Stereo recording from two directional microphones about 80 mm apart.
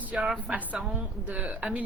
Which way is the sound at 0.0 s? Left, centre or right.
Centre.